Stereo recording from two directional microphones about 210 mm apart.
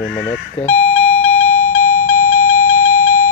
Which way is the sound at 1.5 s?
15° left (ahead or behind).